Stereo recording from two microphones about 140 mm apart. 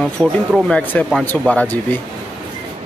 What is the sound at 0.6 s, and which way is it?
Speech, 5° left (ahead or behind).